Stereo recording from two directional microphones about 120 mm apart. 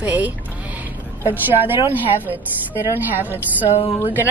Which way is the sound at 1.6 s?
15° right (ahead or behind).